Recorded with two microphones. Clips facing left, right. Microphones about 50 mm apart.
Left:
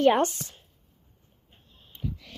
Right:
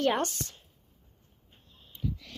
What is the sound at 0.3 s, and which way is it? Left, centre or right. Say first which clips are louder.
Speech: right 2 dB; centre.